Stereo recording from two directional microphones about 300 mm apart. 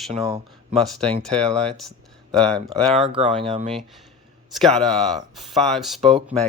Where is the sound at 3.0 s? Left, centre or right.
Centre.